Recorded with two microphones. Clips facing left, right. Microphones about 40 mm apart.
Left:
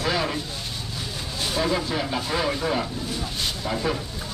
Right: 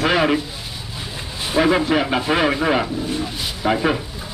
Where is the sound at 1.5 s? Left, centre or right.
Right.